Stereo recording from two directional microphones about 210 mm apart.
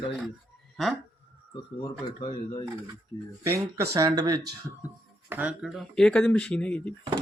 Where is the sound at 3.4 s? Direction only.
15° right (ahead or behind).